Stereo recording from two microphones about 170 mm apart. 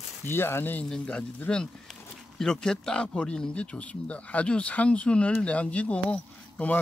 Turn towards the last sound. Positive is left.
turn(degrees=5)  # may be behind; listen again after turning